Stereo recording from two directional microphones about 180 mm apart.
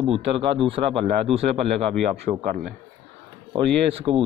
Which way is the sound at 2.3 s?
35° right (ahead or behind).